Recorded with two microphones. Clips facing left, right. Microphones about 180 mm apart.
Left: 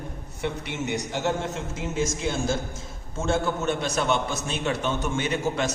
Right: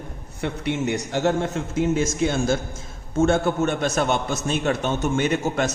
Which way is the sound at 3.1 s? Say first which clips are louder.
Right 6 dB; 55° right (ahead or behind).